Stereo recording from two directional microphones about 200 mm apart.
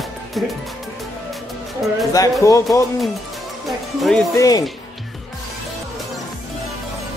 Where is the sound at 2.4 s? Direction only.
15° left (ahead or behind).